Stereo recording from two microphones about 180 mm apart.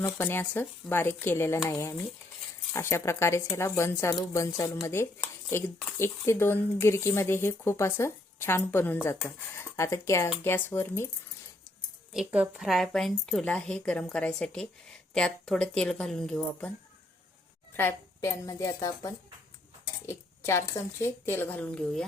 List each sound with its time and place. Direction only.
0.0 s speech: 10° left (ahead or behind)
12.1 s a woman's voice: 5° right (ahead or behind)
17.7 s speech: 15° left (ahead or behind)